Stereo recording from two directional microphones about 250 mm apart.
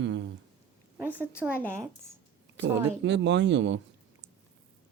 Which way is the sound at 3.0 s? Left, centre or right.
Right.